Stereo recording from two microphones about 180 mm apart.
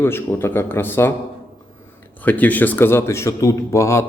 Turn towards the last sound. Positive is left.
turn(degrees=15)  # may be behind; listen again after turning